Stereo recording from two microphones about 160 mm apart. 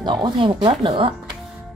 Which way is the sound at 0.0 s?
30° right (ahead or behind).